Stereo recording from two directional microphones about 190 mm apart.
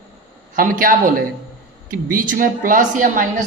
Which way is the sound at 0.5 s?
45° right (ahead or behind).